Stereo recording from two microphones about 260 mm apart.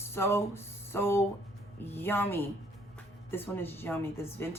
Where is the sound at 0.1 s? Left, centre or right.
Centre.